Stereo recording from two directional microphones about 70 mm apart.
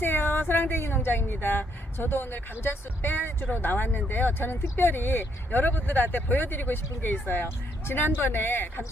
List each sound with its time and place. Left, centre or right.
0.0 s speech: left